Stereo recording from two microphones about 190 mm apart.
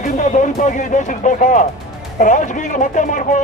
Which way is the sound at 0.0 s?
40° left (ahead or behind).